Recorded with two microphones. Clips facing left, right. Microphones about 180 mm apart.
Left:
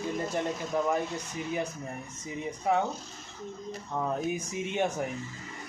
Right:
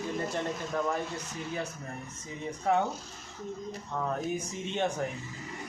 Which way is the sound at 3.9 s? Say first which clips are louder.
Left 2 dB; 15° left (ahead or behind).